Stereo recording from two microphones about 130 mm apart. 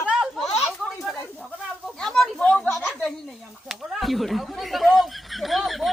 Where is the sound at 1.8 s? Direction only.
5° left (ahead or behind).